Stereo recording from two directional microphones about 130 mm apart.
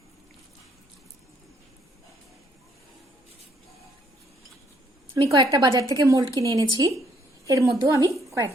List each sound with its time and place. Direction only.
5.1 s a woman's voice: 30° right (ahead or behind)